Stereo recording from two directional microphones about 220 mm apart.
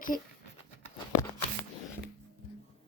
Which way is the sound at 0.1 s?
40° left (ahead or behind).